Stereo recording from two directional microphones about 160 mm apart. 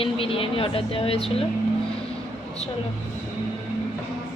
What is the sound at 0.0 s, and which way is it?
A woman's voice, 35° left (ahead or behind).